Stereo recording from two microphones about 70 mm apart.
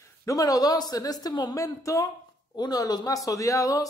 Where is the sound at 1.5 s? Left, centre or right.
Left.